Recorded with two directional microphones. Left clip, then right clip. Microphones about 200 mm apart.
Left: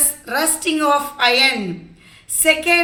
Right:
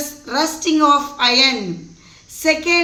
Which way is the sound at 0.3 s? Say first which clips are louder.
Right 2 dB; 45° right (ahead or behind).